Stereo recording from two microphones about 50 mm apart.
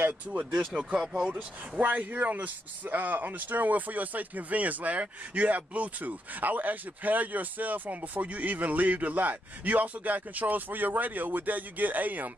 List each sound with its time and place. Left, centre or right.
0.3 s speech: right
1.3 s speech: right